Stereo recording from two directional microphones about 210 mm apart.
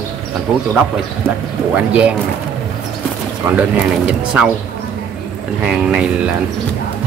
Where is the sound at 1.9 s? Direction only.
5° right (ahead or behind).